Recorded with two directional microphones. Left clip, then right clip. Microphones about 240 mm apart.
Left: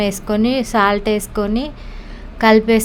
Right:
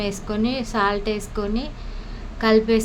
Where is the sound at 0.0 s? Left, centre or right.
Left.